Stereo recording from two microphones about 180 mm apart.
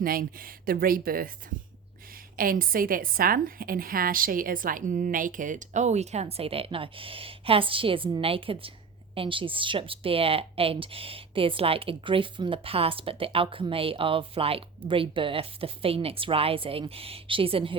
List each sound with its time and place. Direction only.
0.0 s a woman's voice: 55° right (ahead or behind)
2.3 s a woman's voice: 50° right (ahead or behind); by 17.7 s 30° right (ahead or behind)